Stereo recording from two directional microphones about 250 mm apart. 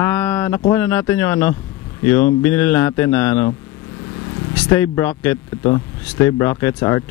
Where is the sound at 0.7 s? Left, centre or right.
Centre.